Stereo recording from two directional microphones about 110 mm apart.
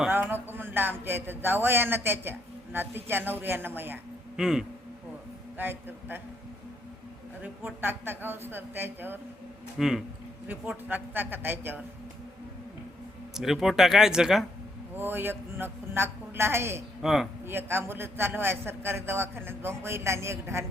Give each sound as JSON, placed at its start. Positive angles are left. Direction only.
{"t": 0.1, "sound": "a man's voice", "side_deg": -20}
{"t": 4.4, "sound": "speech", "side_deg": -5}
{"t": 5.5, "sound": "a man's voice", "side_deg": -15}
{"t": 7.4, "sound": "a man's voice", "side_deg": -20}
{"t": 9.7, "sound": "speech", "side_deg": -5}
{"t": 10.5, "sound": "a man's voice", "side_deg": -15}
{"t": 13.3, "sound": "speech", "side_deg": -5}
{"t": 14.9, "sound": "a man's voice", "side_deg": -20}
{"t": 17.0, "sound": "a man's voice", "side_deg": 0}
{"t": 17.4, "sound": "a man's voice", "side_deg": -20}